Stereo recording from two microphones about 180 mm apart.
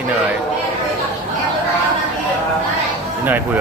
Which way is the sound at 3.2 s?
10° right (ahead or behind).